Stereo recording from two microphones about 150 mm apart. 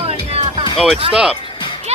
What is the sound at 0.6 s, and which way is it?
Music, 35° left (ahead or behind).